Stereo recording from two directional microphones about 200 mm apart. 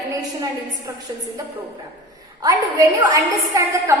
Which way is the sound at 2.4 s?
15° right (ahead or behind).